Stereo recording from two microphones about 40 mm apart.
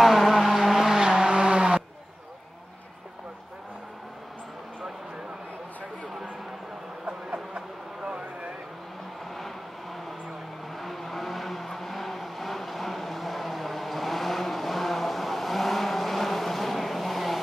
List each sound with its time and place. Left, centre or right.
0.0 s vehicle: centre
1.1 s vehicle: right
7.5 s a sound: right
10.8 s vehicle: centre